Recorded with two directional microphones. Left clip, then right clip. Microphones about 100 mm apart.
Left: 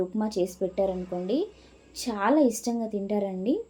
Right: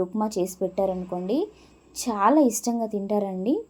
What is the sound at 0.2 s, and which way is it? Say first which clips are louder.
A woman's voice: right 2 dB; 45° right (ahead or behind).